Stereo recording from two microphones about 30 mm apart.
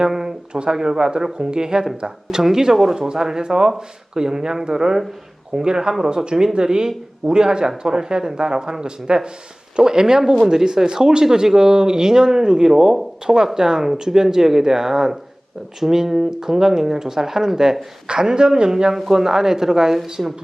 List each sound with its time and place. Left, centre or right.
0.0 s a sound: centre
0.7 s speech: centre
18.1 s speech: right
18.9 s speech: centre
20.2 s speech: right